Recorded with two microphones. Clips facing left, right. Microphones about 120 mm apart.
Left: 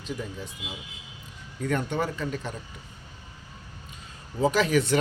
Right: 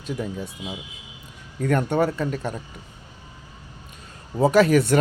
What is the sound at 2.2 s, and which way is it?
Speech, 45° right (ahead or behind).